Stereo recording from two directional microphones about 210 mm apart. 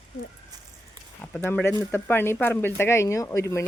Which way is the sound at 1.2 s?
10° left (ahead or behind).